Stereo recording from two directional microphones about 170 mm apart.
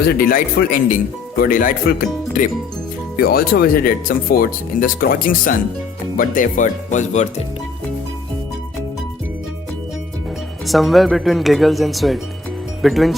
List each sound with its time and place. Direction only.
0.0 s speech: 60° left (ahead or behind)
3.2 s speech: 65° left (ahead or behind); by 7.4 s 45° left (ahead or behind)
10.7 s speech: centre (ahead or behind)